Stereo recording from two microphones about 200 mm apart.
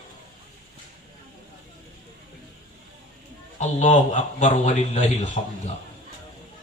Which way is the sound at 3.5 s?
35° left (ahead or behind).